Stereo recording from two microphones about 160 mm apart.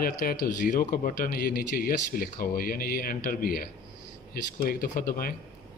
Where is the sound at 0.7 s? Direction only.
60° left (ahead or behind).